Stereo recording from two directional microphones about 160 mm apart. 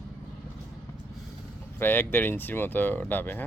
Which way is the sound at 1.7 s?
15° left (ahead or behind).